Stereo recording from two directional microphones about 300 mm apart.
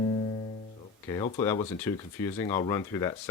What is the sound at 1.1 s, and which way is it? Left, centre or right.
Speech, centre.